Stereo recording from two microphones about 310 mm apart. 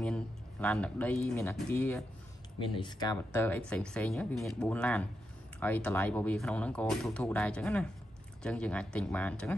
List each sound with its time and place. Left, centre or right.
0.0 s speech: centre